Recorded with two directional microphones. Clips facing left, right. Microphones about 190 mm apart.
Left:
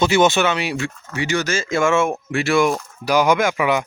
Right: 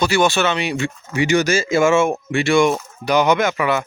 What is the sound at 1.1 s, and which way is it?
Speech, 15° right (ahead or behind).